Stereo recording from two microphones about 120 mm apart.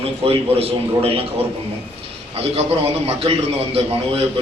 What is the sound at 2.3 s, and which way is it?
A man's voice, 55° right (ahead or behind).